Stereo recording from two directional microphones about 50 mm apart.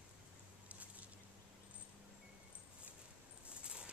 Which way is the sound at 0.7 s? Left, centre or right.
Right.